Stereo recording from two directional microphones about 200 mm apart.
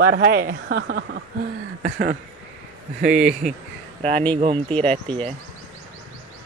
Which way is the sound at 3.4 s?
35° right (ahead or behind).